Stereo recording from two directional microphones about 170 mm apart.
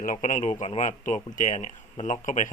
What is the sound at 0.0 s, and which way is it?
Speech, 50° left (ahead or behind).